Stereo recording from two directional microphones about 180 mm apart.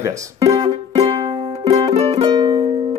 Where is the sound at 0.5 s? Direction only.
30° right (ahead or behind).